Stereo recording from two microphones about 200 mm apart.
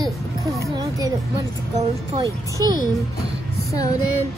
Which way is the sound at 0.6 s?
15° right (ahead or behind).